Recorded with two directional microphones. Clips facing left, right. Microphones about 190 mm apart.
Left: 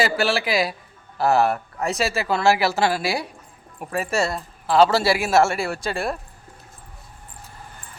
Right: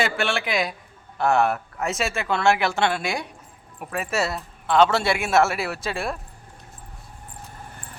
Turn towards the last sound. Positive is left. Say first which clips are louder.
# left 2 dB
turn(degrees=0)  # may be behind; listen again after turning